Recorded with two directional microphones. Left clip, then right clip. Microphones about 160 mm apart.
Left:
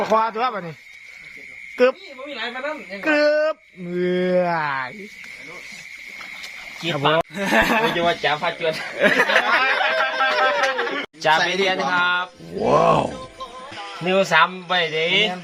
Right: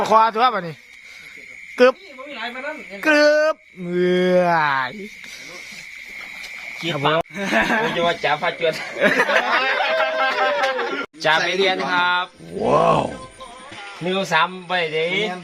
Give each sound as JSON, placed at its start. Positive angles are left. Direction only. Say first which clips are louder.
{"t": 0.0, "sound": "speech", "louder": "right 4 dB", "side_deg": -30}
{"t": 1.7, "sound": "speech", "louder": "right 3 dB", "side_deg": -25}
{"t": 3.0, "sound": "speech", "louder": "right 3 dB", "side_deg": -25}
{"t": 6.4, "sound": "a sound", "louder": "right 1 dB", "side_deg": 0}
{"t": 7.3, "sound": "speech", "louder": "left 1 dB", "side_deg": 40}
{"t": 8.2, "sound": "speech", "louder": "right 1 dB", "side_deg": -10}
{"t": 9.7, "sound": "a sound", "louder": "right 1 dB", "side_deg": 0}
{"t": 11.9, "sound": "speech", "louder": "right 1 dB", "side_deg": -10}
{"t": 12.5, "sound": "speech", "louder": "even", "side_deg": 0}